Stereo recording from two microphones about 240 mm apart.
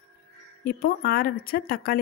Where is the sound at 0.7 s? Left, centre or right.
Left.